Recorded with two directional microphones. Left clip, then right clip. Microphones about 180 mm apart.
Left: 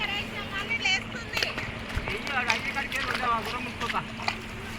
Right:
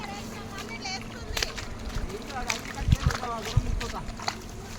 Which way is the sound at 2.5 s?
10° left (ahead or behind).